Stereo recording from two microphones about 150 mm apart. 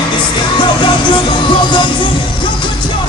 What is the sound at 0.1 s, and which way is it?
Music, 30° left (ahead or behind).